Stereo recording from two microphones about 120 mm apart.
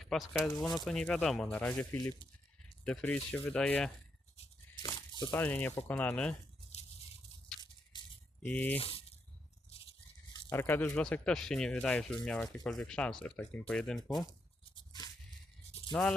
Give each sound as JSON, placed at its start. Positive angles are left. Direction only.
{"t": 0.0, "sound": "speech", "side_deg": 0}
{"t": 4.8, "sound": "a sound", "side_deg": 35}
{"t": 5.3, "sound": "speech", "side_deg": 15}
{"t": 8.4, "sound": "speech", "side_deg": 15}
{"t": 8.8, "sound": "speech", "side_deg": 50}
{"t": 10.5, "sound": "speech", "side_deg": 20}
{"t": 14.8, "sound": "a sound", "side_deg": 35}
{"t": 15.9, "sound": "speech", "side_deg": 5}